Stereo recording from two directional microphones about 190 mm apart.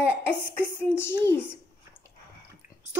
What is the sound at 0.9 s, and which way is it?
Speech, 10° left (ahead or behind).